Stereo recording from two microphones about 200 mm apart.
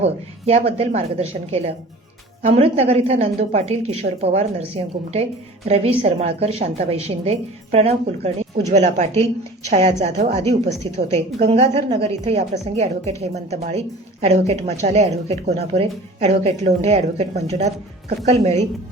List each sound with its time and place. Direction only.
0.0 s a woman's voice: 30° right (ahead or behind)
5.6 s a woman's voice: 30° right (ahead or behind)